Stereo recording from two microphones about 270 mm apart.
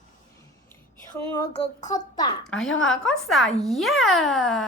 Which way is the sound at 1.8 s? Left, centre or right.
Left.